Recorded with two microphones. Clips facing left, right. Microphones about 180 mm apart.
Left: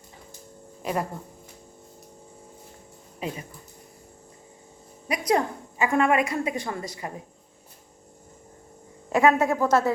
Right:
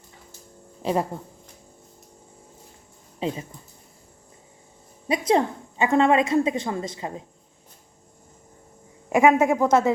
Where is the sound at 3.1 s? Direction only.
25° right (ahead or behind).